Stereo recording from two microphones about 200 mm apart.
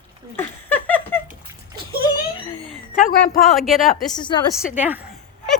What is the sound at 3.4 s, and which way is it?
Speech, centre (ahead or behind).